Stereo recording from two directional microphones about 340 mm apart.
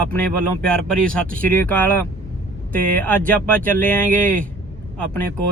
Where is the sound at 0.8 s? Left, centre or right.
Centre.